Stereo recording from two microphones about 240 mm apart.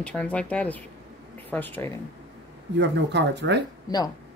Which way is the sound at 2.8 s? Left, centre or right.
Right.